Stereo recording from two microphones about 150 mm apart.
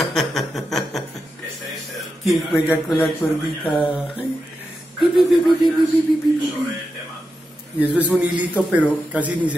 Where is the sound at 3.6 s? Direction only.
Centre (ahead or behind).